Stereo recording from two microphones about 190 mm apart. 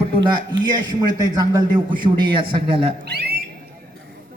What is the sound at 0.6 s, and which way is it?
A man's voice, 20° right (ahead or behind).